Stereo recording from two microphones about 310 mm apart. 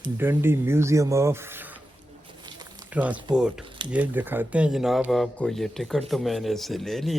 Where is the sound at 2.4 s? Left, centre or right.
Centre.